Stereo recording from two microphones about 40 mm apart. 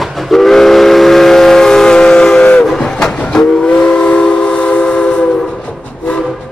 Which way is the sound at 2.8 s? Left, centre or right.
Centre.